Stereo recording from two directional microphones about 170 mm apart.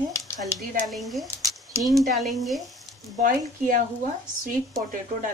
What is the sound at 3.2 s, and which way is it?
Speech, 50° right (ahead or behind).